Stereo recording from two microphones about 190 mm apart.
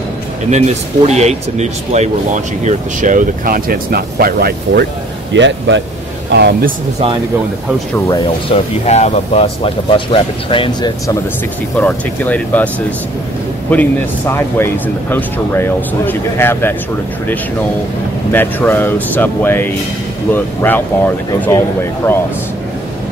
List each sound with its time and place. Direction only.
0.5 s speech: 35° right (ahead or behind); by 4.8 s 55° right (ahead or behind)
5.3 s speech: 70° right (ahead or behind)
6.3 s speech: 60° right (ahead or behind)
8.1 s speech: 20° left (ahead or behind)
8.8 s speech: 35° left (ahead or behind)
11.8 s speech: 10° left (ahead or behind)
13.7 s speech: 10° left (ahead or behind)
18.3 s speech: 10° left (ahead or behind)